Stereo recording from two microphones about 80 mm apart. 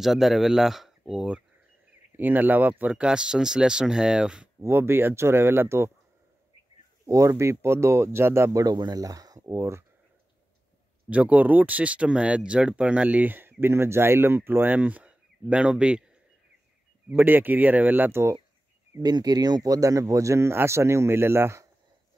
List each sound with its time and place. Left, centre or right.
0.0 s speech: centre
2.1 s speech: right
4.6 s speech: right
7.1 s speech: right
8.5 s speech: right
11.1 s speech: centre
17.1 s speech: right
19.0 s speech: right